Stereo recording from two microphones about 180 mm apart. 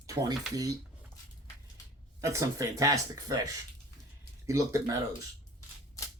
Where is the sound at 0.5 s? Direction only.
20° right (ahead or behind).